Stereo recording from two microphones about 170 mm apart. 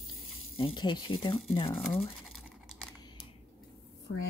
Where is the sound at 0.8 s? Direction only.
25° left (ahead or behind).